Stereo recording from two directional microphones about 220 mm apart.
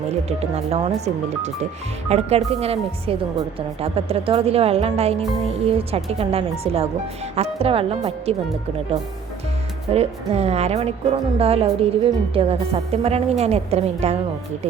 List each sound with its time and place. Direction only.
0.3 s speech: 30° right (ahead or behind)
9.9 s speech: 30° right (ahead or behind)